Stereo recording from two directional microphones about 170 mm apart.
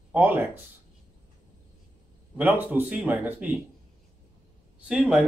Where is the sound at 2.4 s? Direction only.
10° right (ahead or behind).